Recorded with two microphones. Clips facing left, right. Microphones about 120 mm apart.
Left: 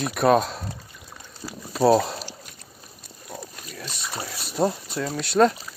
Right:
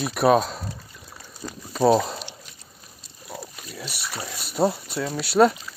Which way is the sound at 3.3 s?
5° right (ahead or behind).